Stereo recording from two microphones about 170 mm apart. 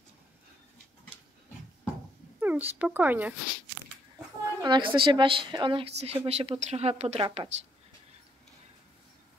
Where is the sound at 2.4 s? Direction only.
10° right (ahead or behind).